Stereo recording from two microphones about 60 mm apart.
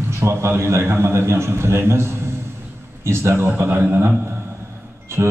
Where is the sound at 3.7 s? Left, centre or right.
Right.